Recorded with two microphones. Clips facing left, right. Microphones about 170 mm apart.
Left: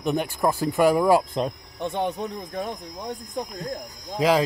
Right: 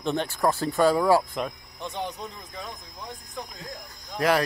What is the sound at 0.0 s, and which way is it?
Speech, 10° left (ahead or behind).